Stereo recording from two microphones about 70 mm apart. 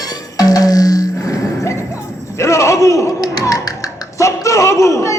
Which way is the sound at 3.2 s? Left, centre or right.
Left.